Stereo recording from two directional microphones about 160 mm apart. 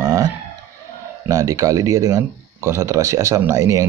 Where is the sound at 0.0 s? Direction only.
20° right (ahead or behind).